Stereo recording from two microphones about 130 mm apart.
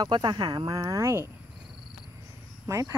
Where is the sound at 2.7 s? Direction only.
25° right (ahead or behind).